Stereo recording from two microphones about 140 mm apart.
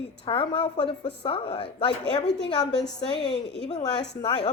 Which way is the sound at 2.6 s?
5° left (ahead or behind).